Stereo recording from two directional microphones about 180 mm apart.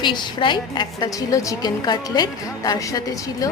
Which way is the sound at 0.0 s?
25° left (ahead or behind).